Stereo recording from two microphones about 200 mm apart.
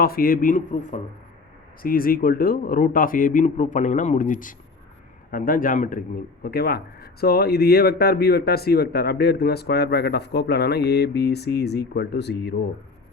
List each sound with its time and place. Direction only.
0.0 s a man's voice: 45° left (ahead or behind)